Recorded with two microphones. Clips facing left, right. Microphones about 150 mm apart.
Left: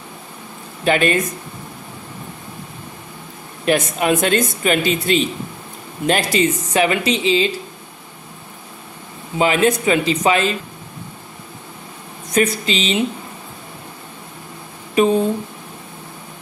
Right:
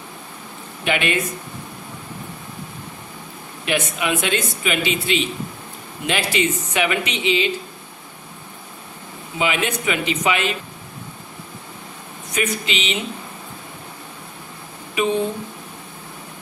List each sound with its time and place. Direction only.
0.8 s speech: 40° left (ahead or behind)
3.6 s speech: 40° left (ahead or behind)
9.4 s speech: 40° left (ahead or behind)
12.3 s speech: 40° left (ahead or behind)